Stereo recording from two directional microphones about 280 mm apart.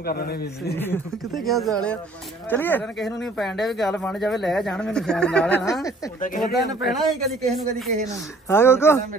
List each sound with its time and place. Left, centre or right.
0.0 s a man's voice: left
0.7 s speech: centre
6.2 s speech: left
6.8 s speech: centre